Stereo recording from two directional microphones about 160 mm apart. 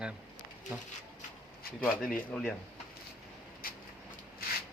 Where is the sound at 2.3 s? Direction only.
5° left (ahead or behind).